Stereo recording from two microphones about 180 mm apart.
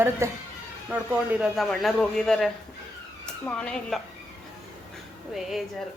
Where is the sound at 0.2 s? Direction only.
15° right (ahead or behind); by 4.0 s 5° left (ahead or behind).